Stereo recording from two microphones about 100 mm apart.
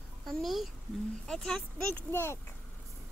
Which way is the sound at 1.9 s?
20° left (ahead or behind).